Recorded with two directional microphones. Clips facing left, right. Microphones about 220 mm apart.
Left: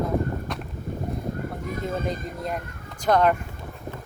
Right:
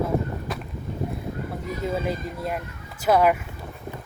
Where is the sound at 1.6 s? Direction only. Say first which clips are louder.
Right 2 dB; 50° left (ahead or behind).